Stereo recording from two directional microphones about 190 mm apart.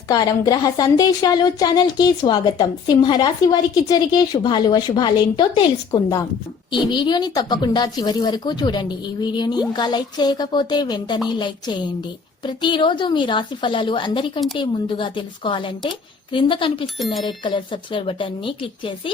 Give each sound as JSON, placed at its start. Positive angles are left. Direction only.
{"t": 0.1, "sound": "a woman's voice", "side_deg": 20}